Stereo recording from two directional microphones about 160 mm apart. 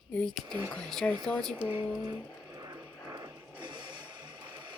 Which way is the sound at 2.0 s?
20° right (ahead or behind).